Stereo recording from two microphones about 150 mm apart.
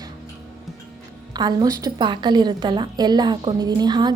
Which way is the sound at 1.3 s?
25° right (ahead or behind).